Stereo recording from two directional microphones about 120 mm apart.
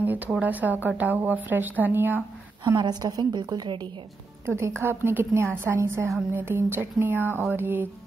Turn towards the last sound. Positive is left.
turn(degrees=-15)  # may be behind; listen again after turning